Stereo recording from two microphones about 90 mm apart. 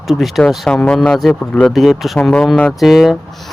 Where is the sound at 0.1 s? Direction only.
Centre (ahead or behind).